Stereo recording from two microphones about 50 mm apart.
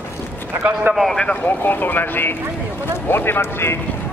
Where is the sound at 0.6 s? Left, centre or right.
Right.